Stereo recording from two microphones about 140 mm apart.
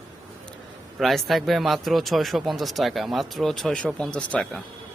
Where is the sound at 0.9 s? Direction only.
Centre (ahead or behind).